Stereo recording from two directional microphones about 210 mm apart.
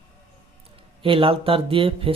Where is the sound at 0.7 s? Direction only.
25° right (ahead or behind).